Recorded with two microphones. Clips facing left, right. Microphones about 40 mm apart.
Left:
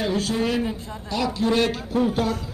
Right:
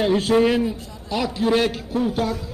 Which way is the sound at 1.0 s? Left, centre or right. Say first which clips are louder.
Right 1 dB; centre.